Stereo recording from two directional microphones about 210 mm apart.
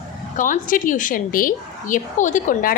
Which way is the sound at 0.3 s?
40° left (ahead or behind).